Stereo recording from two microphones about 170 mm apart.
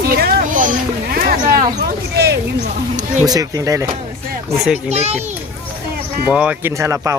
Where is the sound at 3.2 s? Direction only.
20° right (ahead or behind).